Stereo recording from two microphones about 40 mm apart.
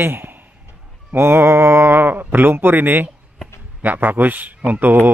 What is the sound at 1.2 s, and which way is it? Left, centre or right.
A man's voice, right.